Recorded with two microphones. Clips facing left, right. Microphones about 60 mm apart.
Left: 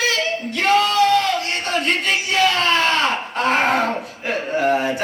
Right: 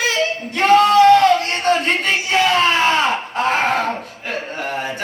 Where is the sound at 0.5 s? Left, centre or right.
Right.